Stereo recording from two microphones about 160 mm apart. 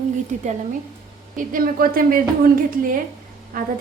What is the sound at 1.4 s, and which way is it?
A woman's voice, 60° right (ahead or behind).